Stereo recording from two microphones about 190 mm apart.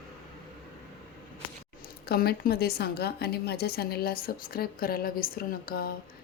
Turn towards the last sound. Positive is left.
turn(degrees=50)  # may be behind; listen again after turning